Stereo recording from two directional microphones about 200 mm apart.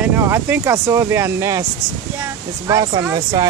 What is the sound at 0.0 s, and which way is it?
Speech, 10° right (ahead or behind).